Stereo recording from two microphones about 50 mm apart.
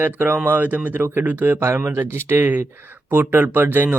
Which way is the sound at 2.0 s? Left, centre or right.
Right.